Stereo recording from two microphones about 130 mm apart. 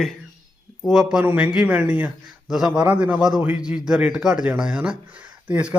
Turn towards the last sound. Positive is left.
turn(degrees=-10)  # may be behind; listen again after turning